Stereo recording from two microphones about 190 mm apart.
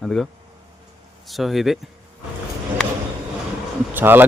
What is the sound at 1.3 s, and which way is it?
Speech, centre (ahead or behind).